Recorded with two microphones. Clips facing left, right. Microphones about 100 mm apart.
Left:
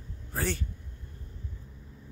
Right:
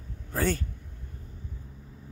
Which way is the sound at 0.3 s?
45° right (ahead or behind).